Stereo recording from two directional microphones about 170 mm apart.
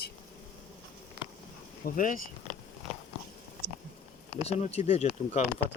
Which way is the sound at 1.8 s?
60° left (ahead or behind).